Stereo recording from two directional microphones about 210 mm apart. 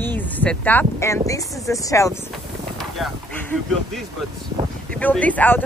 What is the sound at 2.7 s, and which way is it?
Speech, 5° left (ahead or behind).